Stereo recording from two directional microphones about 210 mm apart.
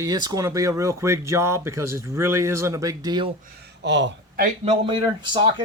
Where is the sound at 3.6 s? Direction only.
55° right (ahead or behind).